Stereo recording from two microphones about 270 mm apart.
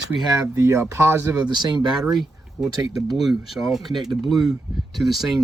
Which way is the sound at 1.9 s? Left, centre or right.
Centre.